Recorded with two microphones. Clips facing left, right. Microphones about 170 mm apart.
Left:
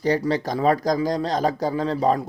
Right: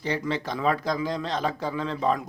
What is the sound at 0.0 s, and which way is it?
A man's voice, 40° left (ahead or behind).